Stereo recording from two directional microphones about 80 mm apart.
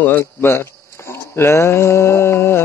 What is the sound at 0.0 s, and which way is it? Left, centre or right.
Speech, left.